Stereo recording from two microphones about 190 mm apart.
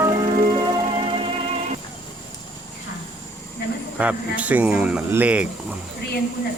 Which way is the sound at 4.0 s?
5° right (ahead or behind).